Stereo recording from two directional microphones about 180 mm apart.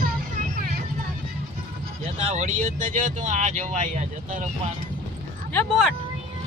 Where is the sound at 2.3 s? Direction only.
40° right (ahead or behind).